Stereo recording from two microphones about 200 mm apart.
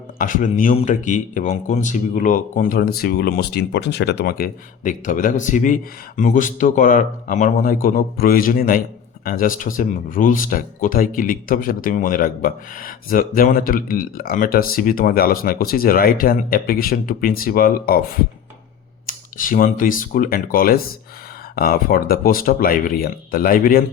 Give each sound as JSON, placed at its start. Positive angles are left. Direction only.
{"t": 0.2, "sound": "speech", "side_deg": 40}